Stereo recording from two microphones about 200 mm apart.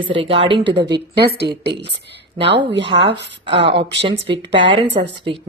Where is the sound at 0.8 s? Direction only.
55° right (ahead or behind).